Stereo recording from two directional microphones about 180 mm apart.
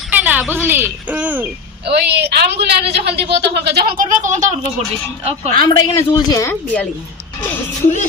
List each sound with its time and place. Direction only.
0.1 s a sound: 10° right (ahead or behind)
0.5 s speech: 10° right (ahead or behind)
1.9 s a woman's voice: 65° right (ahead or behind); by 4.4 s 45° right (ahead or behind)
5.5 s a woman's voice: 20° left (ahead or behind)